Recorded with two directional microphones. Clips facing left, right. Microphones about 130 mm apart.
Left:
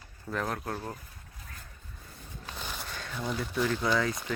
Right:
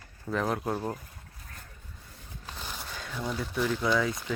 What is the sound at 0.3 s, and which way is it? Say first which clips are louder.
Speech: right 4 dB; 5° right (ahead or behind).